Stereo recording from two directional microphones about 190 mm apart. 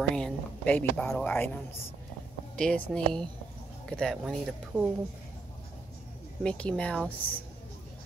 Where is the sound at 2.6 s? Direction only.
5° left (ahead or behind).